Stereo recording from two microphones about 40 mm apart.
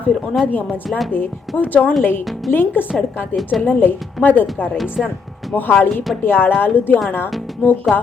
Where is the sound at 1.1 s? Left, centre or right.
Left.